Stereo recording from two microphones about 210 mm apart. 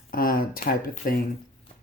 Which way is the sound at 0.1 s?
45° left (ahead or behind).